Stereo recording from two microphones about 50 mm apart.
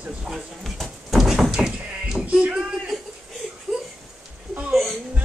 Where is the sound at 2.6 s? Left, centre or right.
Centre.